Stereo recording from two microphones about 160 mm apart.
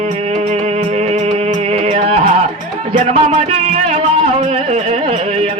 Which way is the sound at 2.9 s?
45° right (ahead or behind).